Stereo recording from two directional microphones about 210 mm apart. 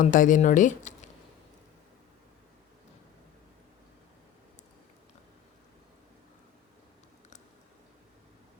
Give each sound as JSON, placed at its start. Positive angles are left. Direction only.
{"t": 0.0, "sound": "speech", "side_deg": 40}